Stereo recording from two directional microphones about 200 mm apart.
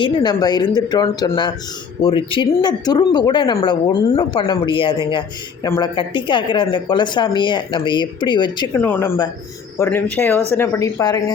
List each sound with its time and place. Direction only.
0.0 s speech: 20° left (ahead or behind)
8.8 s speech: 10° left (ahead or behind)